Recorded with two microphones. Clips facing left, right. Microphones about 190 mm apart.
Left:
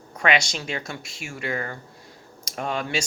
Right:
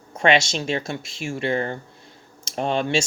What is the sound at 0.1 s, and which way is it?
Speech, 25° right (ahead or behind).